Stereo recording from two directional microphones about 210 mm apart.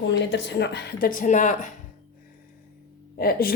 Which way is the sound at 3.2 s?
45° left (ahead or behind).